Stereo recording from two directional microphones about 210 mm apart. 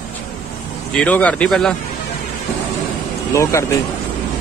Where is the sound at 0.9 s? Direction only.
5° left (ahead or behind).